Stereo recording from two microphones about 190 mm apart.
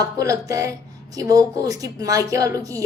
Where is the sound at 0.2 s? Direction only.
15° right (ahead or behind).